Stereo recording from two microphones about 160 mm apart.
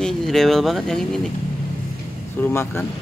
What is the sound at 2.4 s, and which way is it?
Speech, 15° left (ahead or behind).